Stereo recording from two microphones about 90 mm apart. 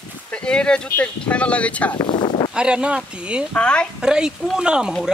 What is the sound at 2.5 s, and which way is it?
Speech, 10° right (ahead or behind).